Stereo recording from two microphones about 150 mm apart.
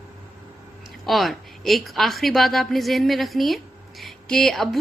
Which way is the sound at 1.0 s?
Centre (ahead or behind).